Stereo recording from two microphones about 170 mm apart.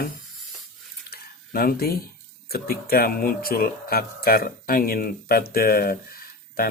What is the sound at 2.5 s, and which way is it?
Speech, 65° left (ahead or behind).